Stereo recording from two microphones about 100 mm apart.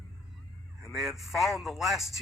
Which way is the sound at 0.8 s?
5° right (ahead or behind).